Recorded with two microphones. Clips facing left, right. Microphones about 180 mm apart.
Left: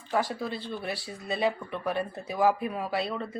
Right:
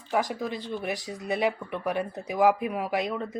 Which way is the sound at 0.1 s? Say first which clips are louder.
Right 1 dB; 15° right (ahead or behind).